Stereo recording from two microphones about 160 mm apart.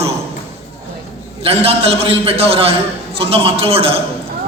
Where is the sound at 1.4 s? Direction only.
40° right (ahead or behind).